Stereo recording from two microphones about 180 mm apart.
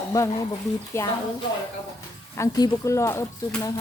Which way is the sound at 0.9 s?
15° left (ahead or behind).